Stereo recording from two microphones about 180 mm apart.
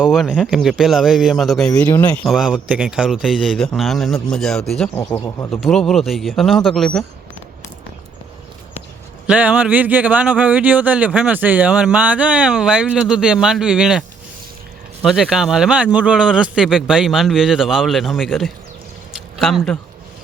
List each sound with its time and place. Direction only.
0.0 s speech: 5° right (ahead or behind)
4.9 s speech: 15° left (ahead or behind)
5.5 s speech: centre (ahead or behind)
9.2 s speech: 5° right (ahead or behind)
15.0 s speech: centre (ahead or behind)
19.1 s a sound: centre (ahead or behind)